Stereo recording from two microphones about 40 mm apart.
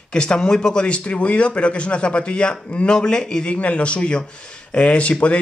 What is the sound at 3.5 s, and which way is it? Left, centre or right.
Speech, left.